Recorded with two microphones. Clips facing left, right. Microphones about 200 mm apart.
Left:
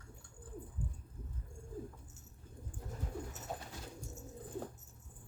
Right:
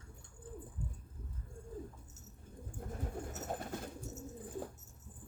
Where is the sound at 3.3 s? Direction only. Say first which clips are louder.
Right 5 dB; 55° right (ahead or behind).